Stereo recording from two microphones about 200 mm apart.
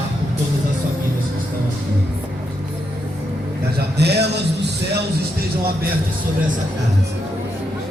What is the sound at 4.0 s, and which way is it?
Music, 55° right (ahead or behind).